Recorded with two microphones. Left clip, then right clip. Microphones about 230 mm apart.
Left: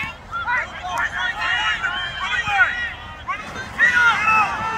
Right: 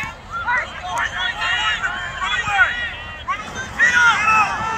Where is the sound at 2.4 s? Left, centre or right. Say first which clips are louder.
Right 1 dB; centre.